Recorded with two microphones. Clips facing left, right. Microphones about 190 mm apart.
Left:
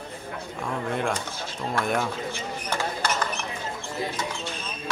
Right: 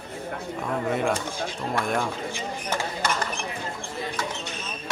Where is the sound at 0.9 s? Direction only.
5° right (ahead or behind).